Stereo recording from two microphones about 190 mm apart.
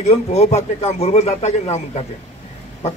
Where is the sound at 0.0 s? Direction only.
35° left (ahead or behind).